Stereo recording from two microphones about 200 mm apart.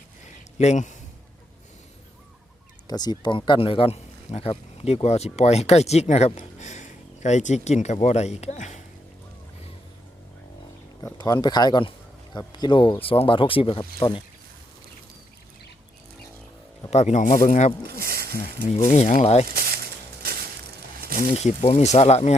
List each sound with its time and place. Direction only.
0.6 s speech: 35° left (ahead or behind)
2.8 s speech: 20° left (ahead or behind); by 8.8 s 35° left (ahead or behind)
11.0 s speech: 20° left (ahead or behind)
16.9 s speech: 35° left (ahead or behind)
17.8 s a sound: 50° right (ahead or behind)
18.6 s speech: 40° left (ahead or behind)
21.3 s speech: 35° left (ahead or behind)